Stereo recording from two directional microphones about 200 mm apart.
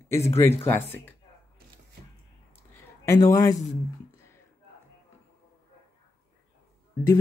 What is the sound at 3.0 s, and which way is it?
Speech, 15° left (ahead or behind).